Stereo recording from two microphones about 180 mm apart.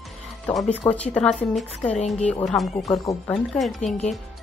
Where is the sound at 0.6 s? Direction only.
5° left (ahead or behind).